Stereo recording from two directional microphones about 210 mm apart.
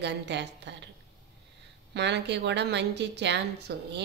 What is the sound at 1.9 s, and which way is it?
A woman's voice, 55° right (ahead or behind).